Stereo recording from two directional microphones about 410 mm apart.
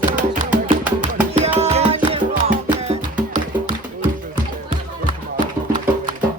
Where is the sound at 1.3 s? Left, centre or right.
Centre.